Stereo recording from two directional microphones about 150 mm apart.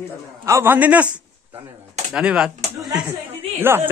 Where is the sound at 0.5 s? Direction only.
15° right (ahead or behind).